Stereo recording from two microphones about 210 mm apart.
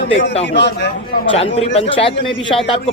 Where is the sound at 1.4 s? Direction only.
30° left (ahead or behind).